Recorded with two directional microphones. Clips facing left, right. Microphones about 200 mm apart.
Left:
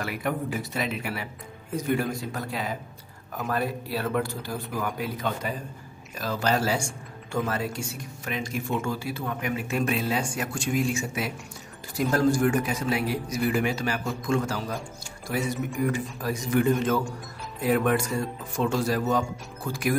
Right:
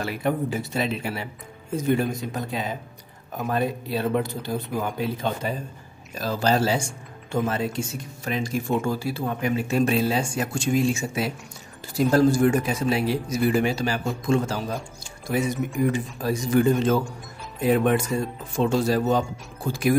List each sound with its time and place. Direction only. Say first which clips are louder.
0.0 s speech: right 4 dB; 30° right (ahead or behind)
15.8 s speech: right 4 dB; 25° right (ahead or behind)